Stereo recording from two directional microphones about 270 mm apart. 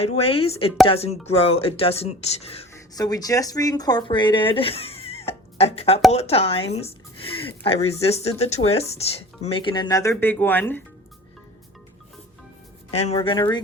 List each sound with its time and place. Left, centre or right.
0.0 s speech: left; by 10.8 s centre
12.9 s speech: left